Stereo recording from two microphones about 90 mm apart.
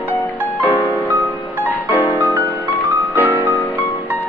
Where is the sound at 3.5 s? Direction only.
20° left (ahead or behind).